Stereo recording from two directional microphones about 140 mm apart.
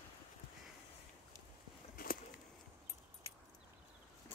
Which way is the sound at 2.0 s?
90° left.